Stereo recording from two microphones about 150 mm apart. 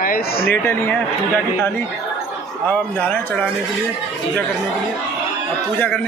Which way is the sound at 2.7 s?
10° left (ahead or behind).